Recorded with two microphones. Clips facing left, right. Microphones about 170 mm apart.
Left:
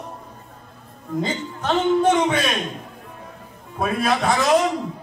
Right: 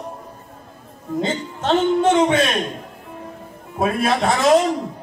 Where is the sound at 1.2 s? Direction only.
25° right (ahead or behind).